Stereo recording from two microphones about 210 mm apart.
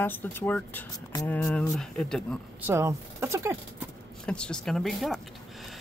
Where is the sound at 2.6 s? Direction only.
15° right (ahead or behind).